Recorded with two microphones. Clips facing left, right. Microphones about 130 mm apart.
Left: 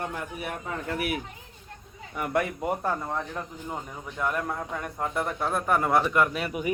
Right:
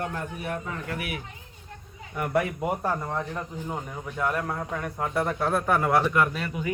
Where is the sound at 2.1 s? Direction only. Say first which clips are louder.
Right 1 dB; centre (ahead or behind).